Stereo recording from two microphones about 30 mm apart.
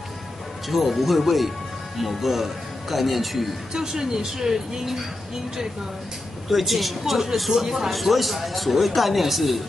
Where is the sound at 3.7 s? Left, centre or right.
Centre.